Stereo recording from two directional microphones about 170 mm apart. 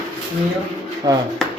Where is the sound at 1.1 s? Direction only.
20° right (ahead or behind).